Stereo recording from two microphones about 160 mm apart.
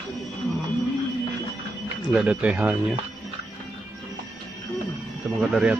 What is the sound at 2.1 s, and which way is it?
Speech, 5° right (ahead or behind).